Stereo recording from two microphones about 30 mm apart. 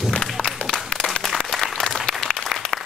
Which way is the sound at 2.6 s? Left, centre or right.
Left.